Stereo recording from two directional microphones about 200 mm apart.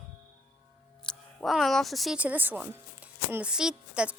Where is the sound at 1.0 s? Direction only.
Centre (ahead or behind).